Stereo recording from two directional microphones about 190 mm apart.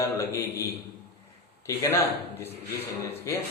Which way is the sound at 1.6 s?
15° left (ahead or behind).